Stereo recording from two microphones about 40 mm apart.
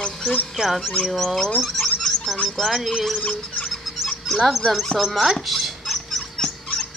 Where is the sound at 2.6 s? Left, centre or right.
Centre.